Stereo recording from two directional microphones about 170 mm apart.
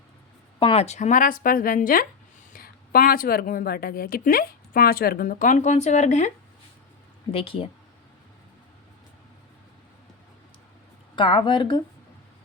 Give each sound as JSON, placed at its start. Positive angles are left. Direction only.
{"t": 0.6, "sound": "a woman's voice", "side_deg": 35}
{"t": 7.3, "sound": "speech", "side_deg": 35}
{"t": 11.1, "sound": "speech", "side_deg": 30}